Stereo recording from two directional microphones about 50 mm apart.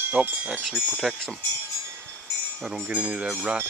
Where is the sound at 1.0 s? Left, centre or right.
Centre.